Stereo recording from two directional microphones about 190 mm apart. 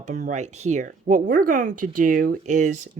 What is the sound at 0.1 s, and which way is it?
Speech, 40° right (ahead or behind).